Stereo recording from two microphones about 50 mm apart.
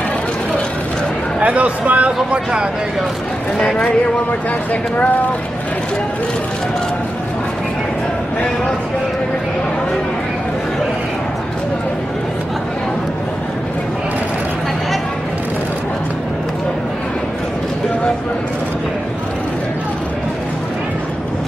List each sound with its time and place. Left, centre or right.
1.4 s speech: right
3.7 s speech: left